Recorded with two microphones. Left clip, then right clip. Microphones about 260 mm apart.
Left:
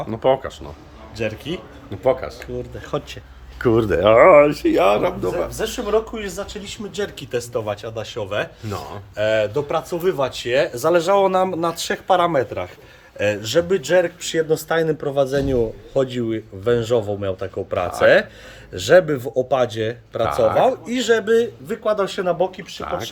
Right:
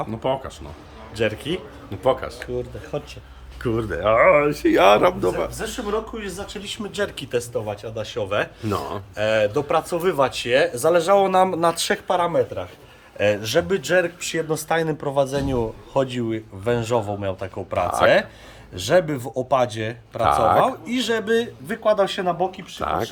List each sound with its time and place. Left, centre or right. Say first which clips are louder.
0.1 s speech: left 6 dB; centre
1.1 s speech: right 2 dB; centre
3.8 s speech: left 5 dB; left
4.4 s speech: right 1 dB; centre
5.5 s speech: left 5 dB; left
6.5 s speech: right 1 dB; centre
13.1 s speech: left 1 dB; centre
20.2 s speech: even; right
20.8 s speech: left 5 dB; centre